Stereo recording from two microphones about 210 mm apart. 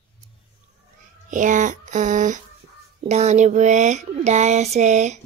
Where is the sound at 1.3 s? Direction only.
35° right (ahead or behind).